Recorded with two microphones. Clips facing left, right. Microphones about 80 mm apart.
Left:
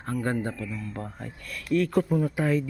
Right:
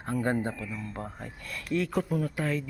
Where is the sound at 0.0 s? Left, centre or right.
Right.